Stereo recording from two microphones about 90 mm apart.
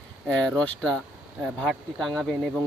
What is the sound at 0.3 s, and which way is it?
Speech, 10° left (ahead or behind).